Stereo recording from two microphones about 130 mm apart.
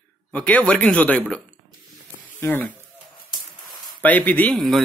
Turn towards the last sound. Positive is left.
turn(degrees=5)  # may be behind; listen again after turning